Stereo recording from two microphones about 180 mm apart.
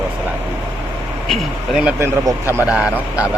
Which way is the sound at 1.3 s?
Centre (ahead or behind).